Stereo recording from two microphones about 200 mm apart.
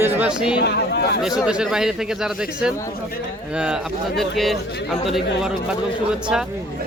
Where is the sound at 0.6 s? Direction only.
55° left (ahead or behind).